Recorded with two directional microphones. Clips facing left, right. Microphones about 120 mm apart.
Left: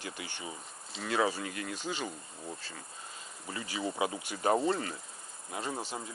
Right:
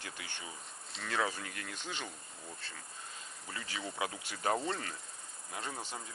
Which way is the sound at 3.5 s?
10° left (ahead or behind).